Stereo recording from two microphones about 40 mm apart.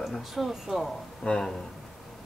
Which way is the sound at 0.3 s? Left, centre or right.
Centre.